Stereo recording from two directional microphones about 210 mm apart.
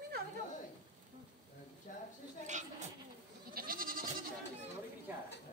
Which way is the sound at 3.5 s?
45° right (ahead or behind).